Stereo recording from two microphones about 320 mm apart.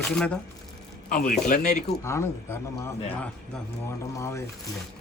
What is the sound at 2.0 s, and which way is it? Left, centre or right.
Speech, centre.